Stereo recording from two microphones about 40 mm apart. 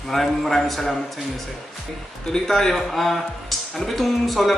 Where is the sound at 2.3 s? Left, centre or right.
Centre.